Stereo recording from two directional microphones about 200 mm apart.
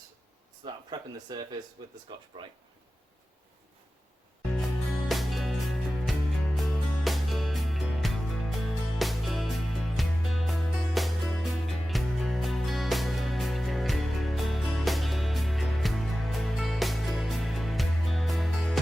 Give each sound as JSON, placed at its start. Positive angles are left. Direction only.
{"t": 0.6, "sound": "speech", "side_deg": -20}
{"t": 5.0, "sound": "music", "side_deg": 0}